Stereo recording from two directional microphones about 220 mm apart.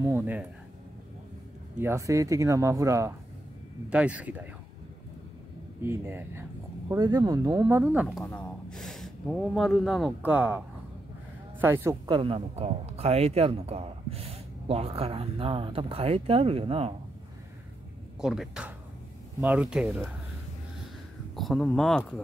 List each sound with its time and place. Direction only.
0.0 s speech: 10° right (ahead or behind)
1.8 s speech: 10° right (ahead or behind)
5.8 s speech: 10° right (ahead or behind)
11.6 s speech: 10° right (ahead or behind)
12.2 s speech: 25° right (ahead or behind)
18.2 s speech: 5° right (ahead or behind)
21.4 s speech: centre (ahead or behind)